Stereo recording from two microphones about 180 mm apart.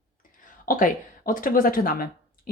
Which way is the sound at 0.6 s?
50° left (ahead or behind).